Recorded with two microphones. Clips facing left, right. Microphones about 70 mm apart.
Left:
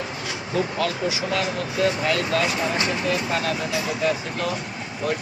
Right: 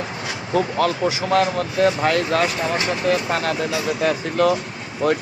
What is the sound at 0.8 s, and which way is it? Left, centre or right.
Speech, right.